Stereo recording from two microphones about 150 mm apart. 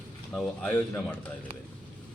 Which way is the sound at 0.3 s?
10° left (ahead or behind).